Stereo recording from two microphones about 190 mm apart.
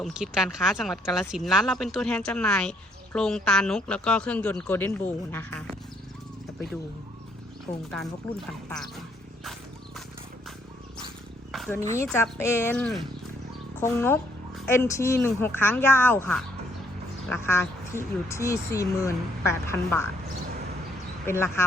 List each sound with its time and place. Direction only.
0.0 s speech: 5° right (ahead or behind)
7.7 s speech: 40° left (ahead or behind)
8.2 s speech: 5° left (ahead or behind)
11.7 s speech: 15° left (ahead or behind)
21.2 s speech: 15° left (ahead or behind)